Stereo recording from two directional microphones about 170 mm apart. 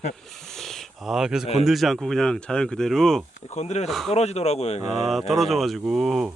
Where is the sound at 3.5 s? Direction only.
40° left (ahead or behind).